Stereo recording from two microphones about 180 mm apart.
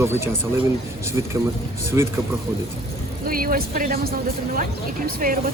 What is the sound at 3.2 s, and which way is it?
Speech, 55° right (ahead or behind).